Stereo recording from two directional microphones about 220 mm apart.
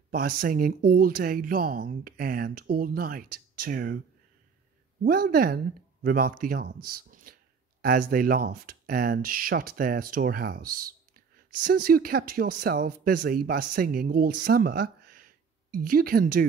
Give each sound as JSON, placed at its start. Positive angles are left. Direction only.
{"t": 0.1, "sound": "speech", "side_deg": -40}
{"t": 5.3, "sound": "speech", "side_deg": -40}